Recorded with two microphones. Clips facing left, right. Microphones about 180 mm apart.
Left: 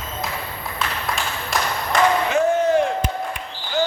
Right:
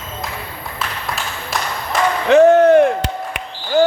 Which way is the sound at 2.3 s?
70° right (ahead or behind).